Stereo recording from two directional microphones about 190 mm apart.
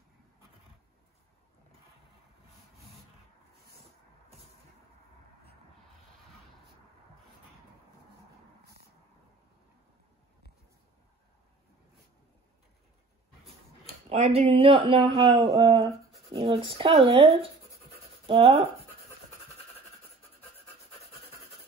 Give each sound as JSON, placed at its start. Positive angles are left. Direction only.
{"t": 14.0, "sound": "speech", "side_deg": -35}